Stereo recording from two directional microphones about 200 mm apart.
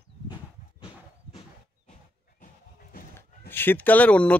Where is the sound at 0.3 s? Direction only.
25° left (ahead or behind).